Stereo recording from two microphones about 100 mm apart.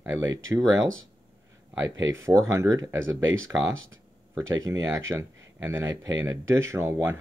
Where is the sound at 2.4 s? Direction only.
35° right (ahead or behind).